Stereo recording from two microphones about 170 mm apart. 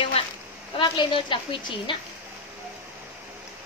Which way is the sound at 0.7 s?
30° left (ahead or behind).